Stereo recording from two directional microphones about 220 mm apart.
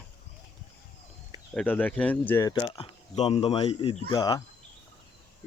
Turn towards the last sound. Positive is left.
turn(degrees=15)  # may be behind; listen again after turning